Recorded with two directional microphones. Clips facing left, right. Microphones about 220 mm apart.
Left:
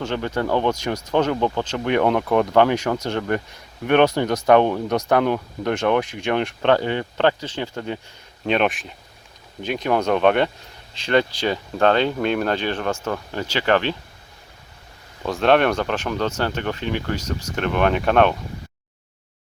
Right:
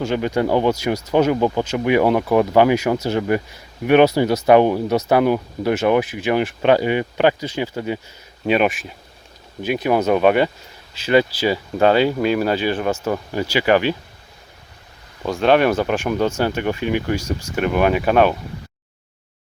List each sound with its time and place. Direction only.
0.0 s speech: 10° right (ahead or behind)
15.2 s speech: centre (ahead or behind)